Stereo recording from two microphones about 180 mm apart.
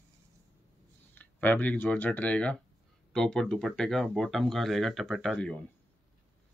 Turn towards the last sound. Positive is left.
turn(degrees=5)  # may be behind; listen again after turning